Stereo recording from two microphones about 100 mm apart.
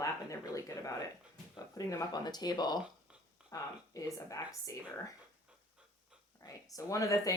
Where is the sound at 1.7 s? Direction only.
40° left (ahead or behind).